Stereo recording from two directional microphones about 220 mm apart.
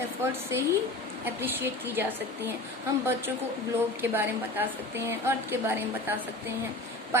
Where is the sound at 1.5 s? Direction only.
10° right (ahead or behind).